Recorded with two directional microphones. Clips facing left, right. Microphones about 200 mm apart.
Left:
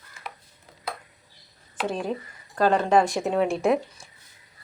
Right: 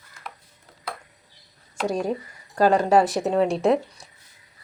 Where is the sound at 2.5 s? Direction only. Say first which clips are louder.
Right 2 dB; 10° right (ahead or behind).